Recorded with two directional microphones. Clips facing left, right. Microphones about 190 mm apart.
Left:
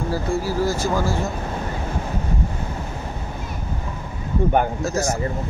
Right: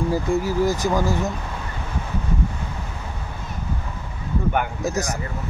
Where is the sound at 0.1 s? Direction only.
20° right (ahead or behind).